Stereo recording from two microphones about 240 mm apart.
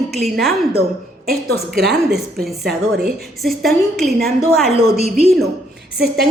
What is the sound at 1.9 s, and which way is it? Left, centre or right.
A woman's voice, centre.